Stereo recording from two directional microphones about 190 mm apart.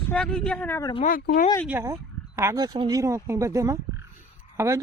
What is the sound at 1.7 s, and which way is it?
Speech, 15° right (ahead or behind).